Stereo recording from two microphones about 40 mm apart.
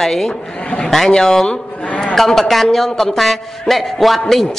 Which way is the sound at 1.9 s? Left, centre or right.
Left.